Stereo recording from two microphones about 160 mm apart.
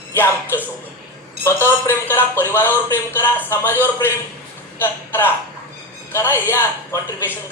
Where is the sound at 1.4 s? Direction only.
15° left (ahead or behind).